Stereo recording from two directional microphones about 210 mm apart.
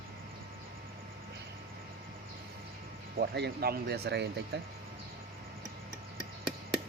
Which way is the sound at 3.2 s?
50° right (ahead or behind).